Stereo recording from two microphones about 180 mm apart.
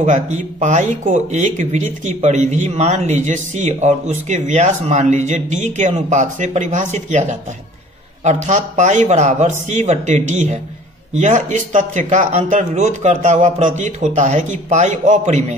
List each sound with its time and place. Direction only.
0.0 s speech: 40° right (ahead or behind)